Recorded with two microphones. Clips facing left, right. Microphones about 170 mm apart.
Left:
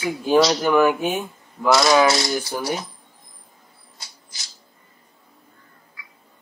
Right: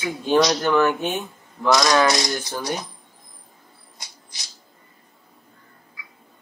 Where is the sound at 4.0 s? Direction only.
20° right (ahead or behind).